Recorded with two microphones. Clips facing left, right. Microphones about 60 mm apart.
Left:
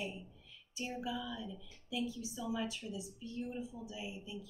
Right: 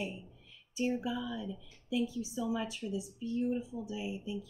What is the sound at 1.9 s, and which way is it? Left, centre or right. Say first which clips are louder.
Speech: right 6 dB; right.